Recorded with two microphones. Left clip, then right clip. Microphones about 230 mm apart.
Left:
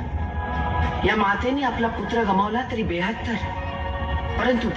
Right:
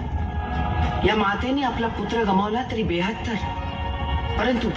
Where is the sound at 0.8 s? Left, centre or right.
Right.